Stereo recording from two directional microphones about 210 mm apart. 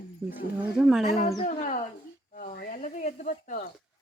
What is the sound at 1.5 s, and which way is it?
Speech, 35° left (ahead or behind).